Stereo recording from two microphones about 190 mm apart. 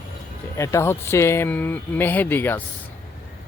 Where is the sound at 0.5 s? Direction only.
15° left (ahead or behind).